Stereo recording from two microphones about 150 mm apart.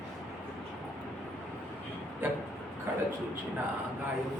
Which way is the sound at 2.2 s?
15° right (ahead or behind).